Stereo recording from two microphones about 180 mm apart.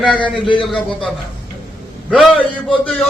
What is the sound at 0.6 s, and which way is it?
A man's voice, 5° left (ahead or behind).